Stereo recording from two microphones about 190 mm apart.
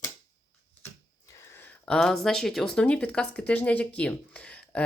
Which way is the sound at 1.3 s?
15° left (ahead or behind).